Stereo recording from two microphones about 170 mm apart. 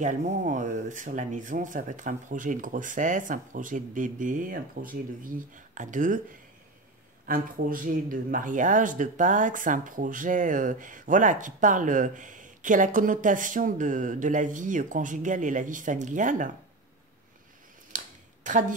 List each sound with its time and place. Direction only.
0.0 s speech: 45° right (ahead or behind)
7.2 s speech: 55° right (ahead or behind)
17.9 s a sound: 45° right (ahead or behind)